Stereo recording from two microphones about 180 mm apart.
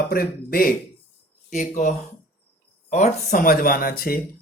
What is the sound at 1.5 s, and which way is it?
Speech, 45° left (ahead or behind).